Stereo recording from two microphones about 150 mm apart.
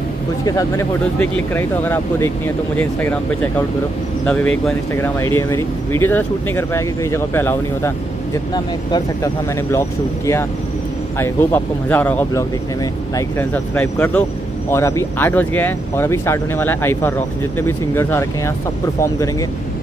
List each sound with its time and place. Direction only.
0.5 s speech: 25° left (ahead or behind)
1.2 s speech: 10° left (ahead or behind)
4.3 s speech: 5° left (ahead or behind)
4.9 s speech: 15° left (ahead or behind)
8.9 s speech: 20° left (ahead or behind)